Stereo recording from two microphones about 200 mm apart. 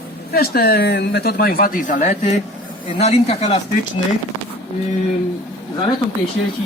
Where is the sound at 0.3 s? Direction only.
50° left (ahead or behind); by 3.6 s 30° left (ahead or behind).